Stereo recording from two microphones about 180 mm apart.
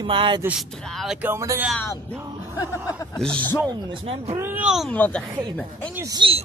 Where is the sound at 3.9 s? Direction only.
30° right (ahead or behind).